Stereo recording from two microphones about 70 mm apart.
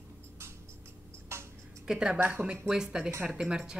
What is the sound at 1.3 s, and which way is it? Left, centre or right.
Music, right.